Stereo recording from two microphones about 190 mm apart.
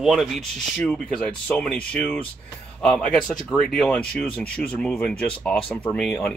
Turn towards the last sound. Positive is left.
turn(degrees=5)  # may be behind; listen again after turning